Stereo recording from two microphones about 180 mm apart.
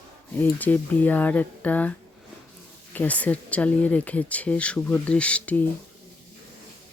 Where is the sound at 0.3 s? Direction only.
10° left (ahead or behind).